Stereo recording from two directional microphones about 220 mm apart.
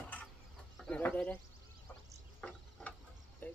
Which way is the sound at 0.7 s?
5° left (ahead or behind).